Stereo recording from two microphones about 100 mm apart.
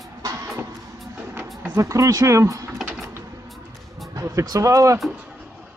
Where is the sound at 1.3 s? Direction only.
20° right (ahead or behind).